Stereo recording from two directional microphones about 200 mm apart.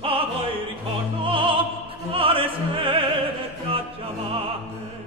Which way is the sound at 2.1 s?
25° right (ahead or behind).